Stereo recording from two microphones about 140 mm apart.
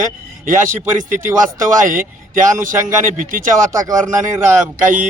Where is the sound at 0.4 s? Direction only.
70° right (ahead or behind).